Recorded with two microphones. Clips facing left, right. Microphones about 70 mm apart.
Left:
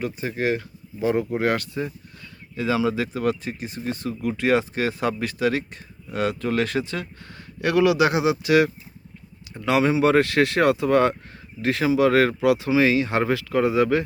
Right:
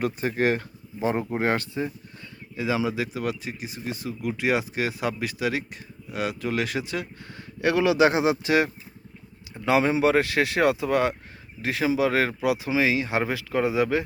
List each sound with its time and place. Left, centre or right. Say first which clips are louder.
0.0 s speech: right 1 dB; right
0.9 s speech: left 3 dB; right
7.6 s speech: left 1 dB; right